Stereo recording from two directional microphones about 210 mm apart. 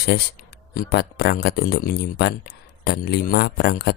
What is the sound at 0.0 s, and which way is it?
Speech, 50° left (ahead or behind).